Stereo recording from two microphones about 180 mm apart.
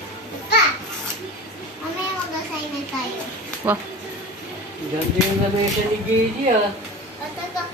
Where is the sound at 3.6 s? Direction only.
10° right (ahead or behind).